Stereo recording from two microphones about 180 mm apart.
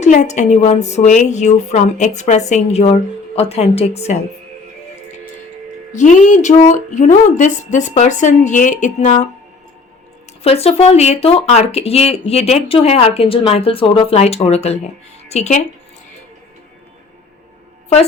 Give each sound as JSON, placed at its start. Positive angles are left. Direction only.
{"t": 0.0, "sound": "a woman's voice", "side_deg": 40}
{"t": 5.9, "sound": "speech", "side_deg": 40}
{"t": 10.4, "sound": "a woman's voice", "side_deg": 35}